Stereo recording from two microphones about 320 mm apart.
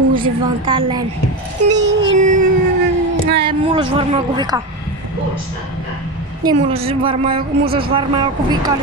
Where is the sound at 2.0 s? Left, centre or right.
Right.